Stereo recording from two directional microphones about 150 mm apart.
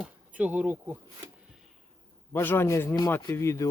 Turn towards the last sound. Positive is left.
turn(degrees=20)  # may be behind; listen again after turning